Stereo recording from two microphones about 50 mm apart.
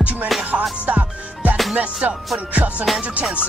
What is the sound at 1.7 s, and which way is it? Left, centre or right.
Speech, right.